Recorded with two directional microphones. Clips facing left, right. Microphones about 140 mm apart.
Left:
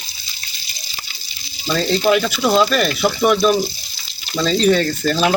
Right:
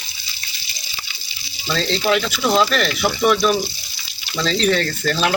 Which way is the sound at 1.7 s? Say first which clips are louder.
Left 3 dB; 15° left (ahead or behind).